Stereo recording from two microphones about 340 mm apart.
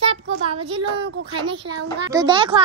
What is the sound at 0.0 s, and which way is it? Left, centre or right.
Child singing, centre.